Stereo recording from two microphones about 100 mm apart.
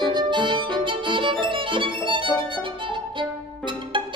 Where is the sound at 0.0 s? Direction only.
50° right (ahead or behind).